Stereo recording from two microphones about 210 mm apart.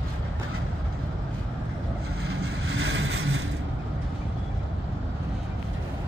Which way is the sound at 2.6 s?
60° right (ahead or behind).